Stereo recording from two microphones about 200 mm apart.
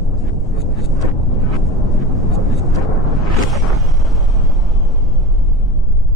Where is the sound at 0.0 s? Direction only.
Centre (ahead or behind).